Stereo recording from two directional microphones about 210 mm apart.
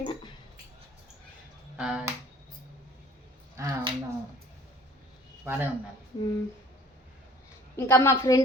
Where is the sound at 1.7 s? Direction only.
5° right (ahead or behind).